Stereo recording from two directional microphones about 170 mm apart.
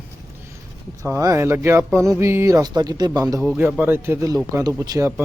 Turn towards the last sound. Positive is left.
turn(degrees=-15)  # may be behind; listen again after turning